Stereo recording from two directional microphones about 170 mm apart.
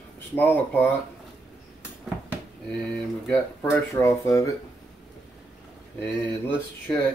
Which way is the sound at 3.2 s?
10° left (ahead or behind).